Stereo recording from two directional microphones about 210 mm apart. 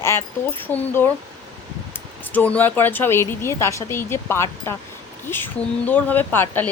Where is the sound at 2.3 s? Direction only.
5° left (ahead or behind).